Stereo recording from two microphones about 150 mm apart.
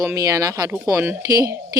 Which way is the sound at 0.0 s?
20° right (ahead or behind).